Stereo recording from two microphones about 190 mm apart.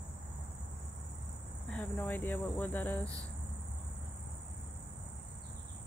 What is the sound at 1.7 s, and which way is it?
Speech, 10° left (ahead or behind).